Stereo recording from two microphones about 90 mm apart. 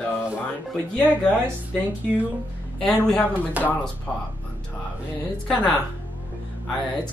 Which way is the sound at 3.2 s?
20° left (ahead or behind).